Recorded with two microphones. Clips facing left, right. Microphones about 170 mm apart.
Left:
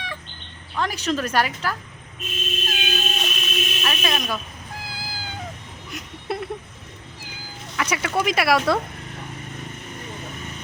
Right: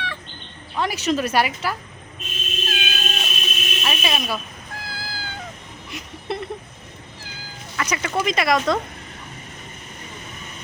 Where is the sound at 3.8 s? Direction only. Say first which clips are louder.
Right 2 dB; 10° right (ahead or behind).